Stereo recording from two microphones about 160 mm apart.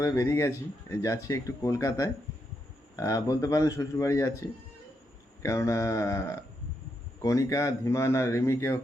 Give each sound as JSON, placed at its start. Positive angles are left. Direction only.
{"t": 0.0, "sound": "a man's voice", "side_deg": 20}